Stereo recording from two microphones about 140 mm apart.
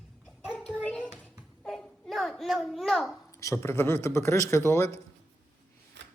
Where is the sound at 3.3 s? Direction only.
20° left (ahead or behind).